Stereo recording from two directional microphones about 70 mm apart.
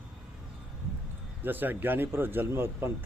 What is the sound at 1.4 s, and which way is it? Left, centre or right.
Speech, right.